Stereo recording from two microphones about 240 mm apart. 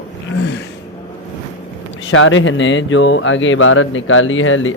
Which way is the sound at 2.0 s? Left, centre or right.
Left.